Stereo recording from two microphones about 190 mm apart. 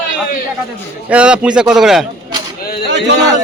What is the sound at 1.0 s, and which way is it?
A man's voice, 5° right (ahead or behind).